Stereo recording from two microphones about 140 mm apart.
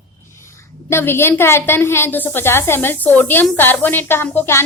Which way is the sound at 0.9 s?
15° left (ahead or behind).